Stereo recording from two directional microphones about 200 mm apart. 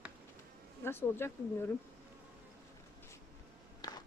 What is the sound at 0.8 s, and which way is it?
Speech, 10° left (ahead or behind).